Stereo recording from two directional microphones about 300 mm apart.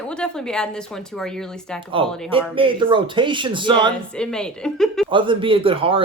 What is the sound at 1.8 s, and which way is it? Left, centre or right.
Speech, centre.